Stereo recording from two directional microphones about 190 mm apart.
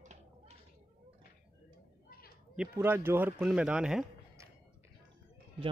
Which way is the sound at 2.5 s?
10° right (ahead or behind).